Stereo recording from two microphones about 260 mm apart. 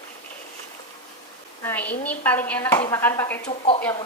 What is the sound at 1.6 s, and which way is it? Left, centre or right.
Speech, centre.